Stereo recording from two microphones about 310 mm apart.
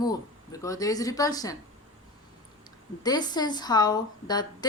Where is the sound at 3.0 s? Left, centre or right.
Centre.